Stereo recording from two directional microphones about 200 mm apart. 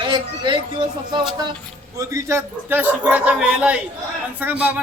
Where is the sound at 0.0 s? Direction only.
25° right (ahead or behind).